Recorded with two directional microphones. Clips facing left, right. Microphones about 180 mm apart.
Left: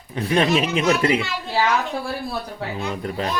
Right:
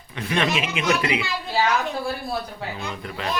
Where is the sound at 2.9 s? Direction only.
40° left (ahead or behind).